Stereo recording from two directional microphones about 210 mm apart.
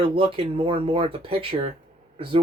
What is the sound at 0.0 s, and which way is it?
Speech, 25° right (ahead or behind).